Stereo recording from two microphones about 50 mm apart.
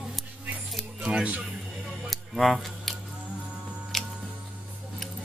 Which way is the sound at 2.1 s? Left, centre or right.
Centre.